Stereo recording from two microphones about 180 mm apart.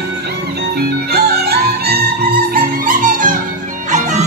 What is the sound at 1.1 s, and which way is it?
Music, 60° right (ahead or behind).